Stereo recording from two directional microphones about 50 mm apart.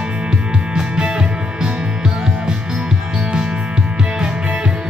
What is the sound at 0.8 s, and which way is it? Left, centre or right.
Music, centre.